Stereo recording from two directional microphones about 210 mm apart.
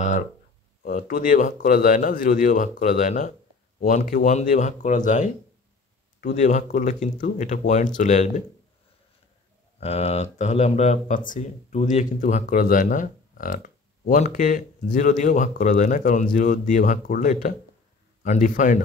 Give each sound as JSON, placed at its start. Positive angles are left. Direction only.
{"t": 0.8, "sound": "speech", "side_deg": 40}
{"t": 9.8, "sound": "speech", "side_deg": 30}